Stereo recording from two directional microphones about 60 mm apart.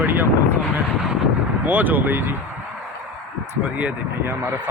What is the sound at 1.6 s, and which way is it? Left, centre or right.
Speech, right.